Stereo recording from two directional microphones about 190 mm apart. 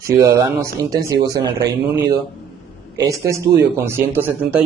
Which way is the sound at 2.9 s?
15° right (ahead or behind).